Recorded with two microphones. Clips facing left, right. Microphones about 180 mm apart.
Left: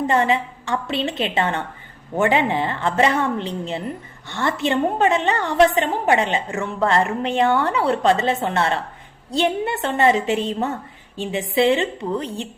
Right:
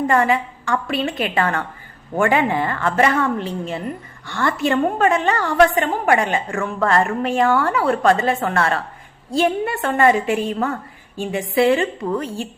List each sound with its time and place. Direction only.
0.1 s a woman's voice: 25° left (ahead or behind)